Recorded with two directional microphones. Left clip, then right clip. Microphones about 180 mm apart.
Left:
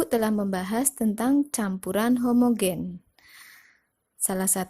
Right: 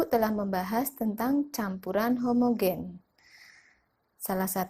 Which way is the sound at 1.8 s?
50° left (ahead or behind).